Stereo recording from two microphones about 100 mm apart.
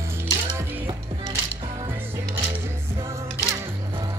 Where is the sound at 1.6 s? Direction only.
75° right (ahead or behind).